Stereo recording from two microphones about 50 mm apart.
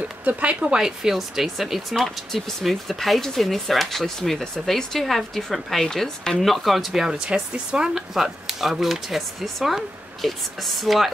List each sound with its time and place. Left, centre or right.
0.2 s speech: right
0.8 s speech: centre
8.1 s speech: centre